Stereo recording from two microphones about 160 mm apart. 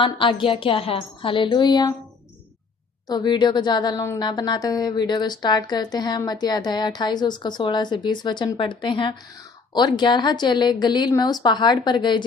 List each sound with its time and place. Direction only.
0.0 s a woman's voice: 30° left (ahead or behind)
3.1 s a woman's voice: 25° left (ahead or behind)